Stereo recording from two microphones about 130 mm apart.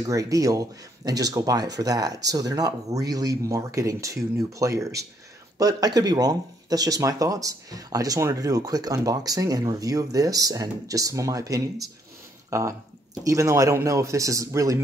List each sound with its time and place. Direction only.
0.0 s speech: 25° right (ahead or behind)